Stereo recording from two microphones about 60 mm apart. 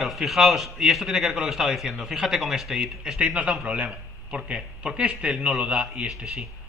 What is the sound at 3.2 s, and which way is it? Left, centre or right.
A man's voice, right.